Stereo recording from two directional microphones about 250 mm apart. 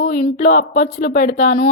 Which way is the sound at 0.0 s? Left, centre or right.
Left.